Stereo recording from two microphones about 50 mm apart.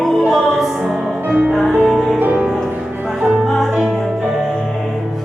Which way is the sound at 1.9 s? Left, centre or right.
Centre.